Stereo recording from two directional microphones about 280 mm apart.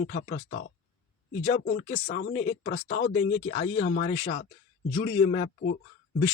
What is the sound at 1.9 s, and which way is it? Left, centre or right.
Speech, left.